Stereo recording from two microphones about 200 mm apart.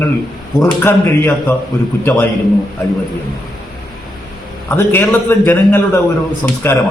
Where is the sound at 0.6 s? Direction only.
10° left (ahead or behind).